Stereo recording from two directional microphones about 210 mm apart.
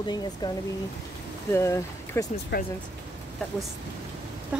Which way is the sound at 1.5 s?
15° left (ahead or behind).